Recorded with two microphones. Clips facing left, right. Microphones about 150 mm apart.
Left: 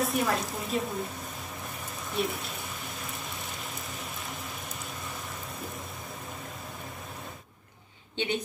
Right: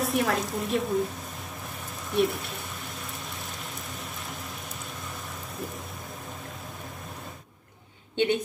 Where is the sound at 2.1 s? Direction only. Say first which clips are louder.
Right 6 dB; centre (ahead or behind).